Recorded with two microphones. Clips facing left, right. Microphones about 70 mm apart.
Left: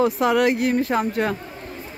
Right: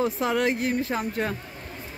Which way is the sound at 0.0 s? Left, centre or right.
Left.